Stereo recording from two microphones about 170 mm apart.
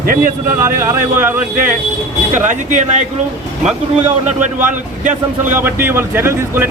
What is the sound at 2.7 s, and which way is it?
Speech, 45° right (ahead or behind).